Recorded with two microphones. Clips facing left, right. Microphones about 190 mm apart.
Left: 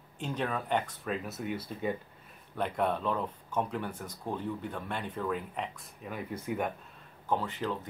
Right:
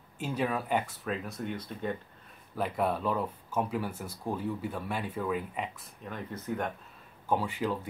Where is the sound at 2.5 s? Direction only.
5° right (ahead or behind).